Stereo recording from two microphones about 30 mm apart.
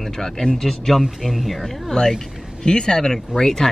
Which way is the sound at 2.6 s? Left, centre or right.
Left.